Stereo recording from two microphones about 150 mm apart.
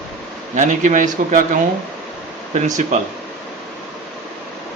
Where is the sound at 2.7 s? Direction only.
55° right (ahead or behind).